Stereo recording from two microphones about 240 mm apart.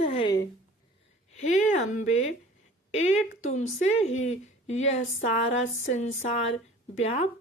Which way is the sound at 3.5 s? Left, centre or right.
Left.